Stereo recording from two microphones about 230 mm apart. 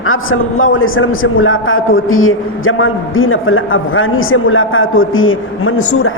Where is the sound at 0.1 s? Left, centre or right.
Left.